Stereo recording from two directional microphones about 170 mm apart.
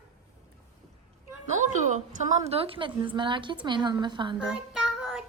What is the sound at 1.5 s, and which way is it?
A woman's voice, 45° right (ahead or behind).